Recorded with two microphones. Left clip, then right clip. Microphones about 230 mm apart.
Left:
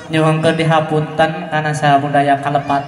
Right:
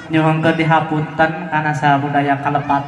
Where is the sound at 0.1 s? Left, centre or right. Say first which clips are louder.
Left 1 dB; left.